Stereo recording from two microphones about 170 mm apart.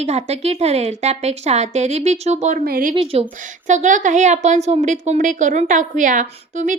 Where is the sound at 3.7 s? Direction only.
45° right (ahead or behind).